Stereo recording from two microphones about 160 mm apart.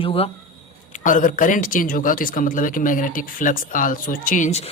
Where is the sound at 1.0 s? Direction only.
55° left (ahead or behind).